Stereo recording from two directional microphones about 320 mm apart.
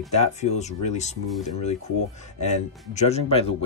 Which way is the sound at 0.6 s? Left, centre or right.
Left.